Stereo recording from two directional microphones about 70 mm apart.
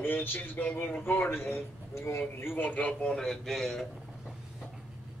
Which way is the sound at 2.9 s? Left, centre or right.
Centre.